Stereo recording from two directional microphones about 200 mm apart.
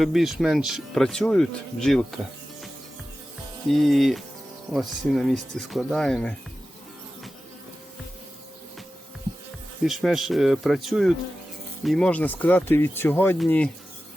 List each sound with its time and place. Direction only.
0.0 s speech: centre (ahead or behind)
3.7 s speech: centre (ahead or behind)
9.8 s speech: centre (ahead or behind)